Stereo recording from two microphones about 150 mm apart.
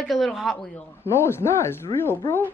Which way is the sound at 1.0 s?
15° left (ahead or behind).